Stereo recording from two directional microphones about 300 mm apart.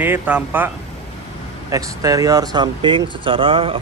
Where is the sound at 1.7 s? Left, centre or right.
Centre.